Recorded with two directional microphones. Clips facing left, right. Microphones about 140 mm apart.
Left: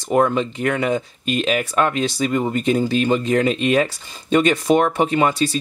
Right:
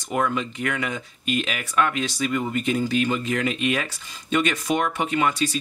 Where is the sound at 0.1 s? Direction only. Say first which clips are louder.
Left 7 dB; 35° left (ahead or behind).